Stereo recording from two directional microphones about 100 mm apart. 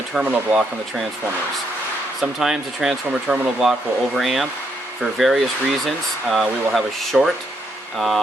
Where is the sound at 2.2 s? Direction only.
5° right (ahead or behind).